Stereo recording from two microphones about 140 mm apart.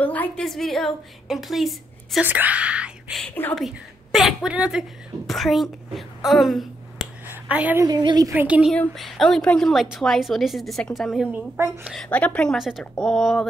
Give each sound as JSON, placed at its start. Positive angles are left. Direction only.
{"t": 0.0, "sound": "a woman's voice", "side_deg": 10}
{"t": 2.2, "sound": "a woman's voice", "side_deg": -10}
{"t": 7.2, "sound": "a sound", "side_deg": -10}
{"t": 7.8, "sound": "a woman's voice", "side_deg": -30}
{"t": 8.3, "sound": "a woman's voice", "side_deg": -10}
{"t": 8.7, "sound": "a woman's voice", "side_deg": 0}
{"t": 11.5, "sound": "a woman's voice", "side_deg": -20}
{"t": 11.8, "sound": "a woman's voice", "side_deg": 0}